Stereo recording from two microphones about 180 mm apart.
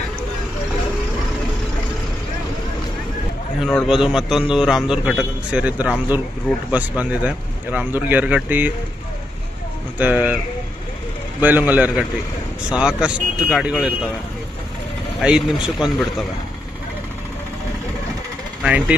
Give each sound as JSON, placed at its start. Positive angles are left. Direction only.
{"t": 3.6, "sound": "a man's voice", "side_deg": 0}
{"t": 9.9, "sound": "speech", "side_deg": -10}
{"t": 11.4, "sound": "a man's voice", "side_deg": -10}
{"t": 15.2, "sound": "a man's voice", "side_deg": -5}
{"t": 18.6, "sound": "speech", "side_deg": -5}